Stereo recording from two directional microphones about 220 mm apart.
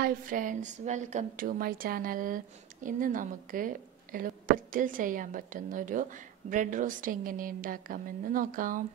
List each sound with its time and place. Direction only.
0.0 s a woman's voice: 40° right (ahead or behind)